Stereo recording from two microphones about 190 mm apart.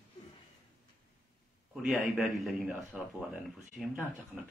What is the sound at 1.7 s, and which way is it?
A man's voice, 5° right (ahead or behind).